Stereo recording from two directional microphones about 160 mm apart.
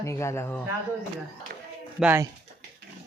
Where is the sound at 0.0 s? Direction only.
20° left (ahead or behind).